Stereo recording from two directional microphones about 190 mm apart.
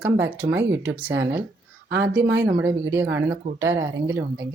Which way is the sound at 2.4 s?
15° right (ahead or behind).